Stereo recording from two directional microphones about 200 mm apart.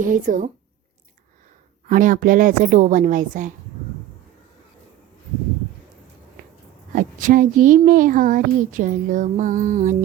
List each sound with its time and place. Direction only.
0.0 s speech: 40° right (ahead or behind)
1.9 s speech: 40° right (ahead or behind)
6.9 s speech: 40° right (ahead or behind)